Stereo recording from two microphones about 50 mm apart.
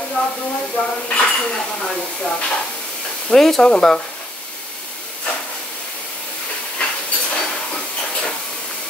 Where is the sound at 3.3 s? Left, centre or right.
Centre.